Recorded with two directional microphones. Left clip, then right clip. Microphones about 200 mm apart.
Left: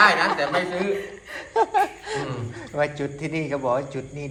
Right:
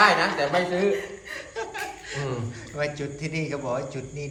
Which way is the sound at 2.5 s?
5° right (ahead or behind).